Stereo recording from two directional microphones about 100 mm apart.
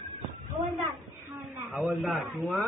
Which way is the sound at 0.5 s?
45° right (ahead or behind).